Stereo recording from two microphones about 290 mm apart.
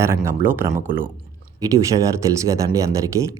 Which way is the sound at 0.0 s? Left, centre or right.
Centre.